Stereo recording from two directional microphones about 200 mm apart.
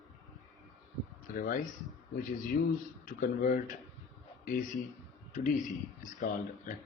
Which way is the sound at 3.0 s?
45° left (ahead or behind).